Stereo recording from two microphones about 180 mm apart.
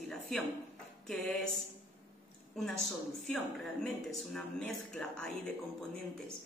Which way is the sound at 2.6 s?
Centre (ahead or behind).